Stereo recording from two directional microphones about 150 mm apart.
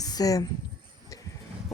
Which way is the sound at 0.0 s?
25° left (ahead or behind).